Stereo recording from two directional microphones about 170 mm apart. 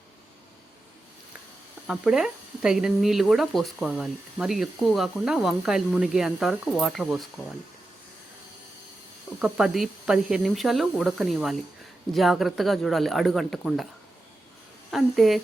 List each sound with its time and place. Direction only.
1.9 s speech: 5° right (ahead or behind)
9.4 s speech: 5° right (ahead or behind)
14.8 s a woman's voice: centre (ahead or behind)